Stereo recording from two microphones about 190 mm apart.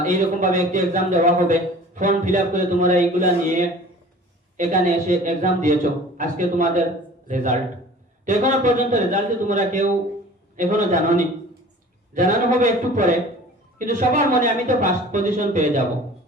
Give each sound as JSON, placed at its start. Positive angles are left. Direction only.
{"t": 0.0, "sound": "a man's voice", "side_deg": -40}
{"t": 12.1, "sound": "a man's voice", "side_deg": -40}